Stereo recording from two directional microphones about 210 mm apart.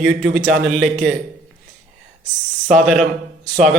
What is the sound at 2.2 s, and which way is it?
Speech, 35° right (ahead or behind).